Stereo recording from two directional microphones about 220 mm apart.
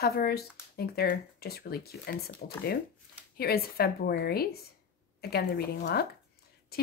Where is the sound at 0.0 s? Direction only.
45° left (ahead or behind).